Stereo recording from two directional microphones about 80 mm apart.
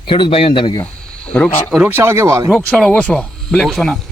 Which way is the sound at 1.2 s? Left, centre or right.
Centre.